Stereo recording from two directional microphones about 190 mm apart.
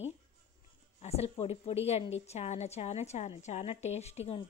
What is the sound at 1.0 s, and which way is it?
A woman's voice, 35° left (ahead or behind).